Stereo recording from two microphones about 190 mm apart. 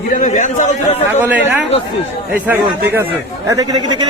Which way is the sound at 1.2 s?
10° right (ahead or behind).